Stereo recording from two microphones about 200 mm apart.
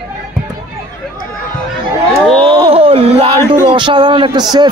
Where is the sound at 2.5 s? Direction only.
25° right (ahead or behind).